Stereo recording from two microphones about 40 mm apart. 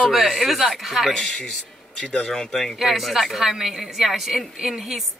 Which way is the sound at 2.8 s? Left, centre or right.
Centre.